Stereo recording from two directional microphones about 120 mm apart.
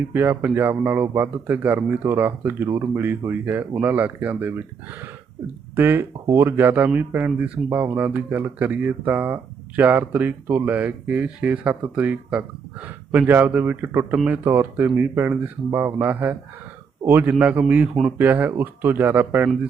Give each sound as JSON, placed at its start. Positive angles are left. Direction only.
{"t": 0.1, "sound": "speech", "side_deg": -20}
{"t": 5.7, "sound": "speech", "side_deg": -15}